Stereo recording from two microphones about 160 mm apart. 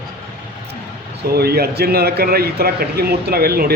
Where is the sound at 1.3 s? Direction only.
75° right (ahead or behind).